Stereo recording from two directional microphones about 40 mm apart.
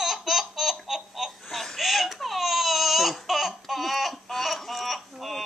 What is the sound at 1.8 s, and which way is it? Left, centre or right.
Baby cry, centre.